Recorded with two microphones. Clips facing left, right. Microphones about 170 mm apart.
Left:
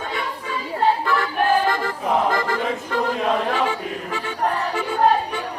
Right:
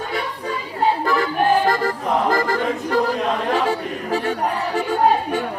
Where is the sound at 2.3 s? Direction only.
40° right (ahead or behind).